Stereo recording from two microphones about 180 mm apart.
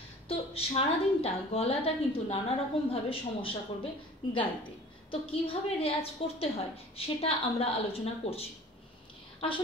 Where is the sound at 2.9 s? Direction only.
30° left (ahead or behind).